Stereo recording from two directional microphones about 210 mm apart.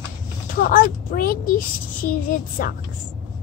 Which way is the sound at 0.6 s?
40° left (ahead or behind).